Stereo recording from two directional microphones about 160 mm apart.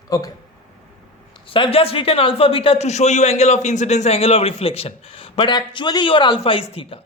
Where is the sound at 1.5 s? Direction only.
35° left (ahead or behind).